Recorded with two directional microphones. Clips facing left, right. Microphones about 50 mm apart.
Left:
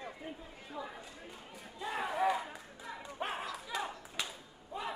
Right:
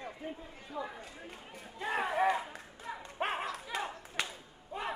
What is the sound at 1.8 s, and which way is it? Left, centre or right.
Speech, right.